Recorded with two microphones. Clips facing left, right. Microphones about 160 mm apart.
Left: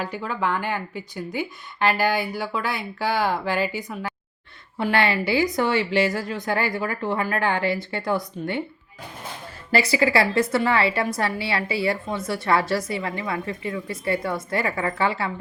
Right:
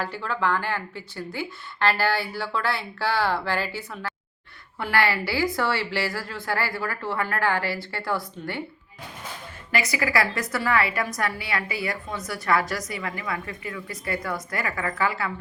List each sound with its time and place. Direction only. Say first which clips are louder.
0.0 s a woman's voice: left 1 dB; 15° left (ahead or behind)
9.7 s a woman's voice: left 5 dB; 30° left (ahead or behind)